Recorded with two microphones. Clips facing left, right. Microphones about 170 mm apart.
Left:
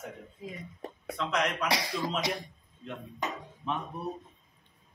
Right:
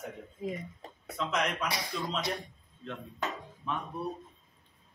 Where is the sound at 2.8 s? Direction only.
15° left (ahead or behind).